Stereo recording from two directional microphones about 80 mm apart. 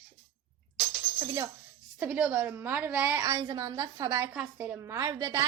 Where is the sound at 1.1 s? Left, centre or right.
Right.